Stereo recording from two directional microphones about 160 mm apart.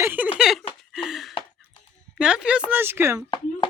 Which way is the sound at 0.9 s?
Centre (ahead or behind).